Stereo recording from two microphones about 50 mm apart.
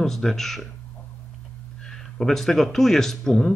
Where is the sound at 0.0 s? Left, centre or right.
Centre.